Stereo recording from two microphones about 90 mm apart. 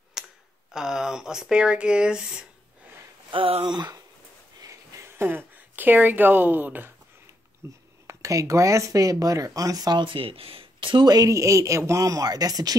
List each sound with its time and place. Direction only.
0.2 s tick: 5° right (ahead or behind)
0.7 s speech: 5° right (ahead or behind)
3.3 s speech: 80° right
3.7 s speech: 55° right (ahead or behind)
4.6 s a sound: 35° right (ahead or behind)
5.2 s speech: 20° right (ahead or behind); by 11.1 s 70° right (ahead or behind)
11.1 s speech: 40° right (ahead or behind)